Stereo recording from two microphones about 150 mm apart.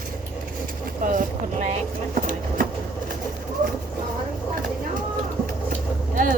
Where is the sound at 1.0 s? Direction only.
65° right (ahead or behind).